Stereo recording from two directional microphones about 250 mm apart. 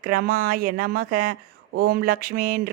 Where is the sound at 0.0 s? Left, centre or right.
Right.